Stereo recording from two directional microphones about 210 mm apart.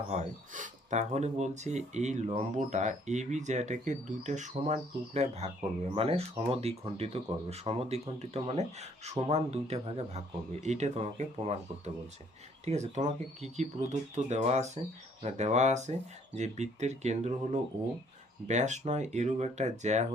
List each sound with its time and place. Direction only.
0.1 s speech: 35° right (ahead or behind)
12.6 s speech: 30° right (ahead or behind)